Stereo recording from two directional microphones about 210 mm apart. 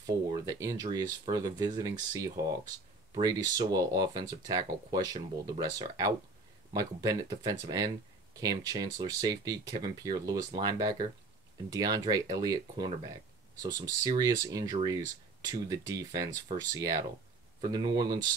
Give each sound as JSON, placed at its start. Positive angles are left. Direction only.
{"t": 0.0, "sound": "speech", "side_deg": -15}